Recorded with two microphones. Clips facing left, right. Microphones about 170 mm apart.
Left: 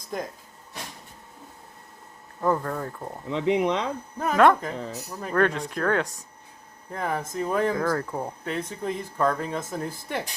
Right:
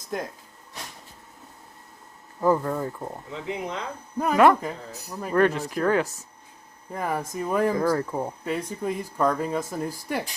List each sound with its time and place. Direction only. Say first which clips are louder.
0.1 s speech: right 1 dB; centre (ahead or behind)
2.4 s speech: right 3 dB; 10° right (ahead or behind)
3.3 s speech: left 10 dB; 75° left (ahead or behind)
4.2 s speech: right 1 dB; 10° right (ahead or behind)